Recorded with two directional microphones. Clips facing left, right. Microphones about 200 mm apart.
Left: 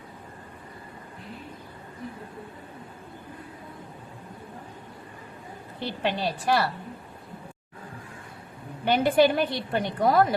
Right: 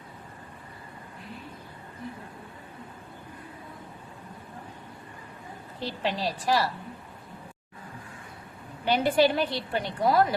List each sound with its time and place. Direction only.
5.8 s a woman's voice: 60° left (ahead or behind)
8.8 s a woman's voice: 50° left (ahead or behind)